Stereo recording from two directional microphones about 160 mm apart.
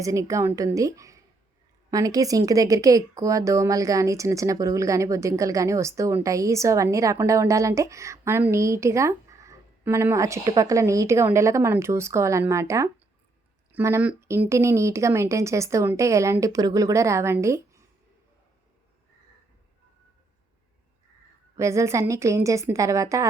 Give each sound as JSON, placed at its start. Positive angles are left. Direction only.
{"t": 0.0, "sound": "speech", "side_deg": -20}
{"t": 21.5, "sound": "speech", "side_deg": -20}